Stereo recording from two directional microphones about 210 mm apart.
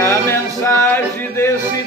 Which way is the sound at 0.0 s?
10° left (ahead or behind).